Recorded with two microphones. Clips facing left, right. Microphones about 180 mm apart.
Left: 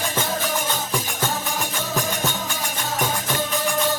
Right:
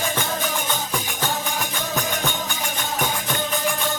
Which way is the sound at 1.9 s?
Centre (ahead or behind).